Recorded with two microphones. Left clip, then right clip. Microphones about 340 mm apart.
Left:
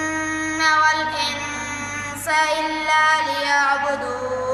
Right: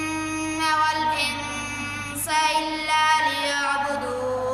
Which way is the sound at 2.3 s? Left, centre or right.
Centre.